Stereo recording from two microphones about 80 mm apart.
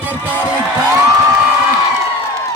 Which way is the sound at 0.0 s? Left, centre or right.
Right.